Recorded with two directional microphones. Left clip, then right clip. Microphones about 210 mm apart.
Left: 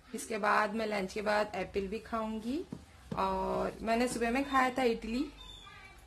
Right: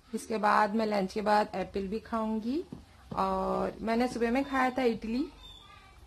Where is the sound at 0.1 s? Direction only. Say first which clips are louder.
Right 3 dB; 40° right (ahead or behind).